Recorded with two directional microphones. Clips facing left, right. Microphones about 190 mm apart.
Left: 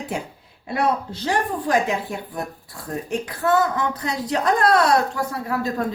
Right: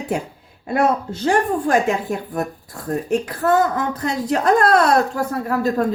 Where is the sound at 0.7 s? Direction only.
50° right (ahead or behind).